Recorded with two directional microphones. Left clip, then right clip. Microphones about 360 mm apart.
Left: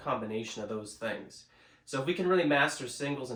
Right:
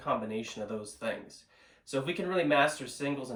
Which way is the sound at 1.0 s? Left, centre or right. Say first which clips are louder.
Right 2 dB; centre.